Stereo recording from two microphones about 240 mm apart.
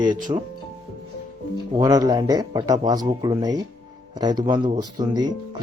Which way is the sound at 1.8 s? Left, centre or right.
Centre.